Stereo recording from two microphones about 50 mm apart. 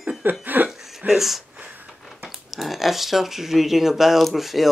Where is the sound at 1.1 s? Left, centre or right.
Centre.